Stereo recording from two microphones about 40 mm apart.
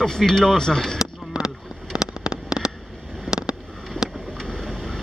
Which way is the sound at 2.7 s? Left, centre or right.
Centre.